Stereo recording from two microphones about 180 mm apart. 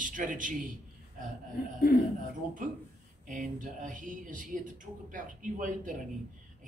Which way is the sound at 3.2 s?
45° right (ahead or behind).